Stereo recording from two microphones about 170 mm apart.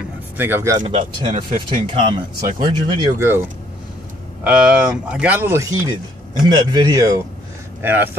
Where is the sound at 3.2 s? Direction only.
15° right (ahead or behind).